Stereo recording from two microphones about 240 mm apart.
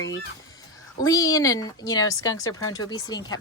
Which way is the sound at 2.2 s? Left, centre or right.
Left.